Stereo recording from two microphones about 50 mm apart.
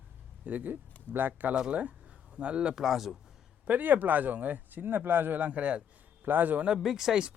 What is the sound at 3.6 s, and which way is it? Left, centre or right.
Speech, right.